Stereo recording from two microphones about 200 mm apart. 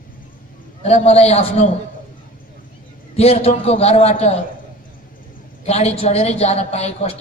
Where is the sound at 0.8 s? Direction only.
30° left (ahead or behind).